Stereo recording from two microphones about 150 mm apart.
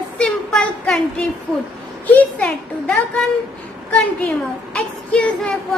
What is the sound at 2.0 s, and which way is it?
A woman's voice, 10° left (ahead or behind).